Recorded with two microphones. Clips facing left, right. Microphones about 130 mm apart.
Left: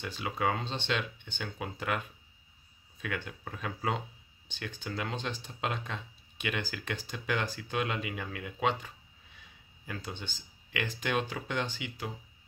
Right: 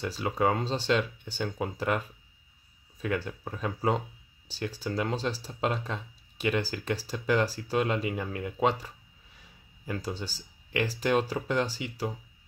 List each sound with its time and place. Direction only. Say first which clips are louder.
0.0 s speech: right 5 dB; 40° right (ahead or behind)